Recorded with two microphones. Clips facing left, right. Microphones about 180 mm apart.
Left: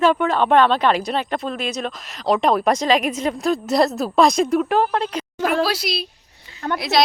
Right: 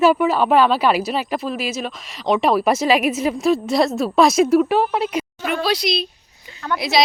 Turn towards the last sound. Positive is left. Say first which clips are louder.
# even
turn(degrees=0)  # may be behind; listen again after turning